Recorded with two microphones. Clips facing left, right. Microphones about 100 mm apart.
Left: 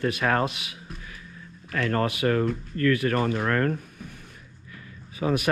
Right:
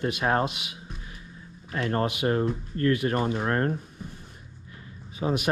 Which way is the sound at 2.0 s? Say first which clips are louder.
Left 1 dB; 25° right (ahead or behind).